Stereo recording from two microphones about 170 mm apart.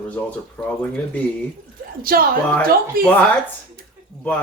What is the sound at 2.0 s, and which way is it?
Speech, 60° right (ahead or behind).